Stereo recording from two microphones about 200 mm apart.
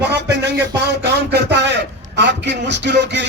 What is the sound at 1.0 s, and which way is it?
A man's voice, 55° right (ahead or behind).